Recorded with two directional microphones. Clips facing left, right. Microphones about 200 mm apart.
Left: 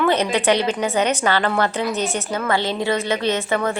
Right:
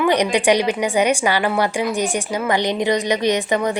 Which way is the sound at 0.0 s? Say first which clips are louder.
Right 2 dB; 15° right (ahead or behind).